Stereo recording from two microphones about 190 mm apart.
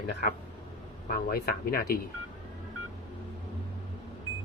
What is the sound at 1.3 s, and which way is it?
Speech, 50° left (ahead or behind).